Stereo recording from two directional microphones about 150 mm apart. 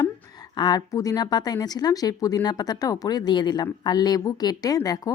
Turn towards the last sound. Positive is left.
turn(degrees=25)  # may be behind; listen again after turning